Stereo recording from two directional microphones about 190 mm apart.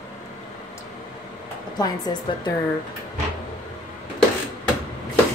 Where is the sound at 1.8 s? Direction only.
20° left (ahead or behind).